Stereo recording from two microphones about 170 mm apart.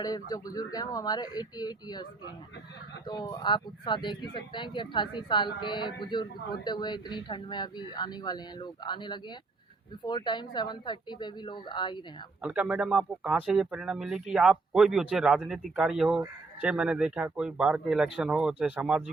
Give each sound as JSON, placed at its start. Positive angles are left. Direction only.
{"t": 0.0, "sound": "speech", "side_deg": 20}
{"t": 3.1, "sound": "speech", "side_deg": 25}
{"t": 12.4, "sound": "speech", "side_deg": -10}